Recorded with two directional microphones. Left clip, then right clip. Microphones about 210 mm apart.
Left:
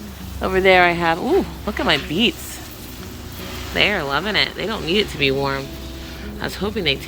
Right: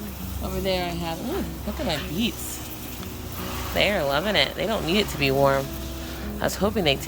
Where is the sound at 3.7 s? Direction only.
10° right (ahead or behind).